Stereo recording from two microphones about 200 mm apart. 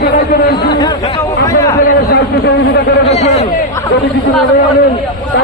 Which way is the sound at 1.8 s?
55° left (ahead or behind).